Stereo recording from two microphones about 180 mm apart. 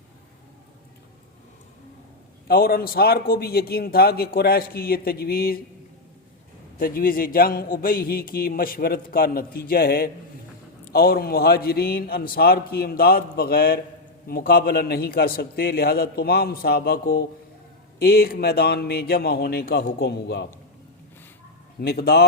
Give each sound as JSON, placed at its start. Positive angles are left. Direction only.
{"t": 2.5, "sound": "a man's voice", "side_deg": 55}
{"t": 6.7, "sound": "a man's voice", "side_deg": 55}
{"t": 21.8, "sound": "a man's voice", "side_deg": 60}